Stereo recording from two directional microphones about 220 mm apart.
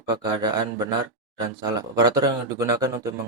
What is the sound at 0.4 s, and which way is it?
Speech, 20° right (ahead or behind).